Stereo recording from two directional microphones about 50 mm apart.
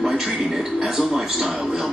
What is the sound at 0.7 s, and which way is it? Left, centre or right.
Speech, centre.